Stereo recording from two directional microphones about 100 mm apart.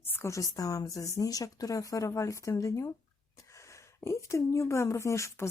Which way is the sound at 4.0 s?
30° left (ahead or behind).